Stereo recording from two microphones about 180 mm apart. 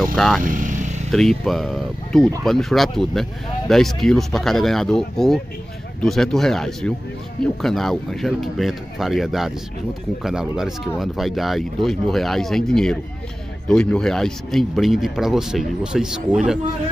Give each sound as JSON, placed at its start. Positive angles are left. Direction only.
{"t": 0.1, "sound": "speech", "side_deg": 0}
{"t": 0.4, "sound": "vehicle", "side_deg": -50}
{"t": 1.1, "sound": "speech", "side_deg": 5}